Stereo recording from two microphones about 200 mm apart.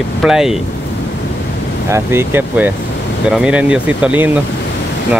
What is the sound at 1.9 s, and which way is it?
Speech, 10° right (ahead or behind).